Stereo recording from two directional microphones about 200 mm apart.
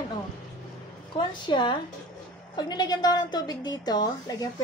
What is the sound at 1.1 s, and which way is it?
A woman's voice, 25° left (ahead or behind).